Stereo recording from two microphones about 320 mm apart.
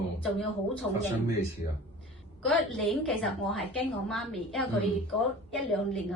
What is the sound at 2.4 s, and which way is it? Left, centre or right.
A woman's voice, centre.